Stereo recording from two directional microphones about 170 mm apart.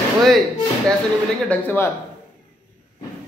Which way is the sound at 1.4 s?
10° left (ahead or behind).